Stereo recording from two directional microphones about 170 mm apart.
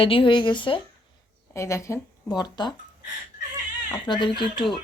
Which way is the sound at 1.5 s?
15° left (ahead or behind).